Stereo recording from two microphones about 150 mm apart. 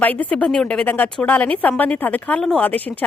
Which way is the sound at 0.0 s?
10° left (ahead or behind).